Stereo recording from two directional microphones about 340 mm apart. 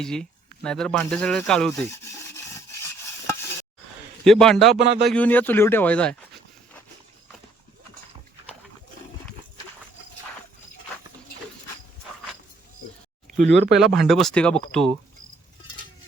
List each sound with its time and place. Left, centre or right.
0.0 s speech: centre
4.2 s speech: centre
4.8 s speech: right
5.0 s speech: centre
13.5 s speech: right
13.7 s speech: centre